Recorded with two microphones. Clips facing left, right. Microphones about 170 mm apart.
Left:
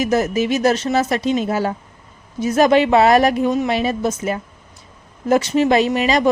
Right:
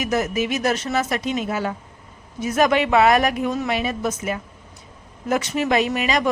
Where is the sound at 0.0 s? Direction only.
30° left (ahead or behind).